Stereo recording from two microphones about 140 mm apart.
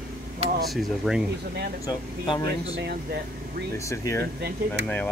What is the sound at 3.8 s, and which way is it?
Speech, 20° left (ahead or behind).